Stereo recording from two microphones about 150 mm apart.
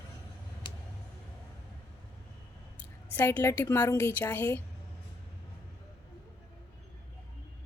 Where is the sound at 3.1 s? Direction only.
15° left (ahead or behind).